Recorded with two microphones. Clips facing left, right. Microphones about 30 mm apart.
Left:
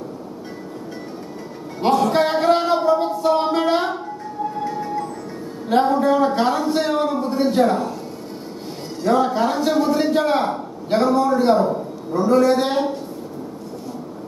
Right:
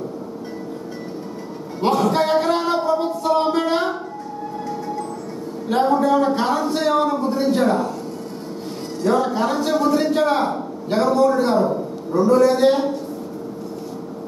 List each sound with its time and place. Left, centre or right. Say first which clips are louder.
1.8 s a sound: left 1 dB; centre
4.6 s music: left 1 dB; centre
5.7 s a man's voice: even; centre
9.0 s a man's voice: left 1 dB; centre